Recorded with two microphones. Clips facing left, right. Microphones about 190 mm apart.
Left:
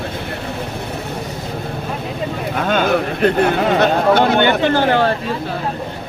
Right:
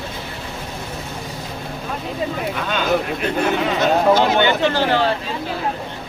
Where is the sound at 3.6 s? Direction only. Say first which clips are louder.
Left 3 dB; 60° left (ahead or behind).